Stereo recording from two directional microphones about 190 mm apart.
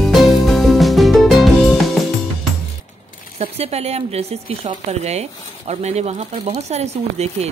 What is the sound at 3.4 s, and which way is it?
Speech, 35° right (ahead or behind).